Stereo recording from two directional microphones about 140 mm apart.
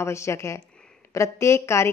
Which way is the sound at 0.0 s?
20° left (ahead or behind).